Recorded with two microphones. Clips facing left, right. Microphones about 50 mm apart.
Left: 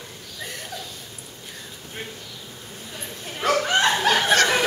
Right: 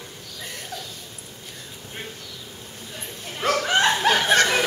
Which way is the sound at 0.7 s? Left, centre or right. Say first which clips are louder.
Even; centre.